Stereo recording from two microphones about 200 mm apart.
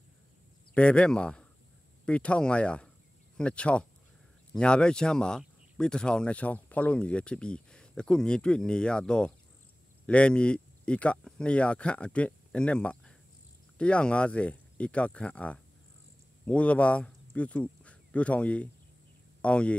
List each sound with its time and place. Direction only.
0.7 s speech: 5° left (ahead or behind)